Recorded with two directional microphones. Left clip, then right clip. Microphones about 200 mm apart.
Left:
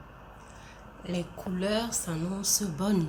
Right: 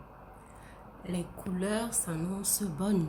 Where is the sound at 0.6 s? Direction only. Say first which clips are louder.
Left 2 dB; 5° right (ahead or behind).